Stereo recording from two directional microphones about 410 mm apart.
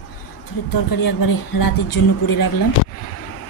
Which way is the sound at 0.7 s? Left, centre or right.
Left.